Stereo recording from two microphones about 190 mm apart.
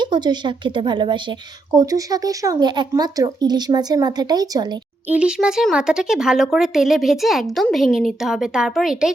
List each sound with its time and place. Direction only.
0.0 s a woman's voice: 25° right (ahead or behind)
5.0 s speech: 5° right (ahead or behind)